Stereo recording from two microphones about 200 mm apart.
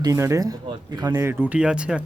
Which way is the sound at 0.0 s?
15° right (ahead or behind).